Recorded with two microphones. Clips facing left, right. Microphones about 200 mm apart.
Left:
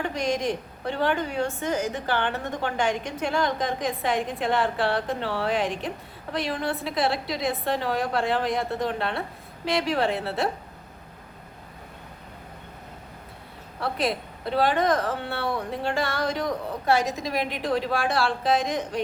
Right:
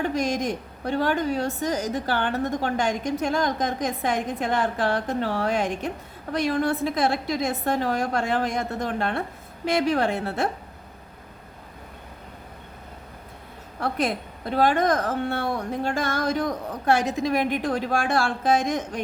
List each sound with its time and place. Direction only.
0.0 s a woman's voice: 45° right (ahead or behind)
13.7 s a woman's voice: 45° right (ahead or behind)